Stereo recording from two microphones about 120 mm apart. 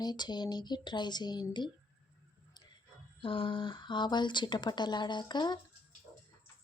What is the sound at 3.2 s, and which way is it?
Speech, 45° left (ahead or behind).